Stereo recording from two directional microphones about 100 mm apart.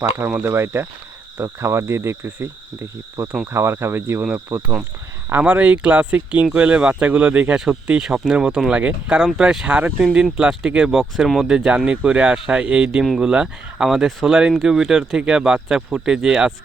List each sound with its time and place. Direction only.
0.4 s cricket: 25° right (ahead or behind)
5.3 s speech: 15° right (ahead or behind)
8.0 s speech: 5° right (ahead or behind)